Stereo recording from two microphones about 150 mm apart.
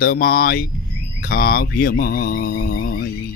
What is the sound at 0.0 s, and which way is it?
Mantra, 75° left (ahead or behind).